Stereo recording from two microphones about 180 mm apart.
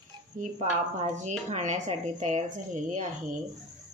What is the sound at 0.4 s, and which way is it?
A woman's voice, 40° right (ahead or behind).